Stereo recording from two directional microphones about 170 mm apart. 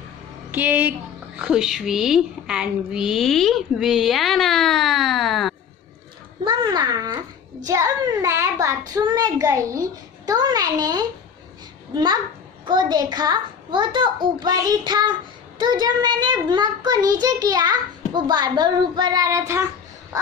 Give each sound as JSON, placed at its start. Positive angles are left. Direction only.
{"t": 0.5, "sound": "a woman's voice", "side_deg": -10}
{"t": 6.4, "sound": "a child's voice", "side_deg": -30}